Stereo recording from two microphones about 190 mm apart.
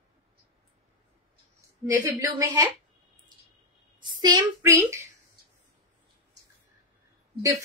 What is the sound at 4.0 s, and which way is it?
A woman's voice, 20° right (ahead or behind).